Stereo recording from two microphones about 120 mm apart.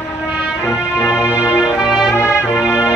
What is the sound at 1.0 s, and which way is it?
Music, 20° left (ahead or behind).